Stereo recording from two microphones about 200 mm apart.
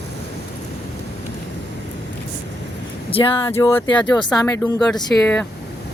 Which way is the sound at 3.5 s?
10° left (ahead or behind).